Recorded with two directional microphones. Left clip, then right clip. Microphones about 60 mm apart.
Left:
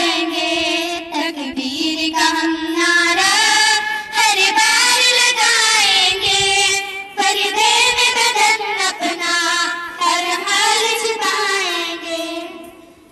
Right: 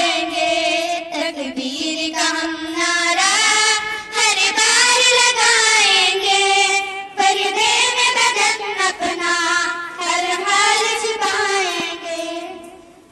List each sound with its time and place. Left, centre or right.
0.0 s music: right
1.8 s singing: right
5.9 s music: right
6.1 s child singing: centre
6.5 s music: centre
7.3 s child singing: centre
7.8 s music: right
9.6 s singing: centre